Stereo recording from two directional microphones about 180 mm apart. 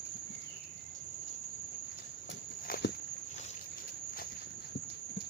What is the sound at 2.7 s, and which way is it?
Walk, 55° left (ahead or behind).